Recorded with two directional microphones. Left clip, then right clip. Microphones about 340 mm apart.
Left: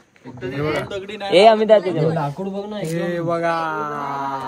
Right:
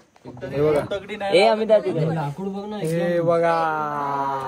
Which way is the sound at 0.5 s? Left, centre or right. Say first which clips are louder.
Right 4 dB; centre.